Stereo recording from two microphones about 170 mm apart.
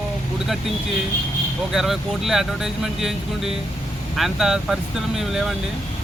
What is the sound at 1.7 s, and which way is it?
Speech, centre (ahead or behind).